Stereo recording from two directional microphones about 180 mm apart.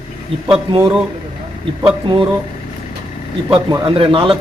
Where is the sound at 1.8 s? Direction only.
30° right (ahead or behind).